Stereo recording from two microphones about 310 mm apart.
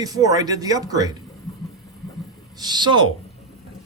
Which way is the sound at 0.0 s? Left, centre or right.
Centre.